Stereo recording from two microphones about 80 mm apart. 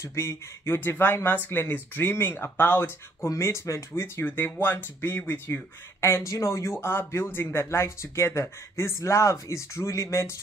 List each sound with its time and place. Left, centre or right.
0.0 s speech: left